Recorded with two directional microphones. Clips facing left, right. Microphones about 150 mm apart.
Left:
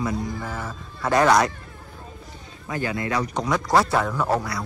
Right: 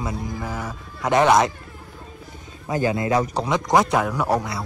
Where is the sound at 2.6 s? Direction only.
20° right (ahead or behind).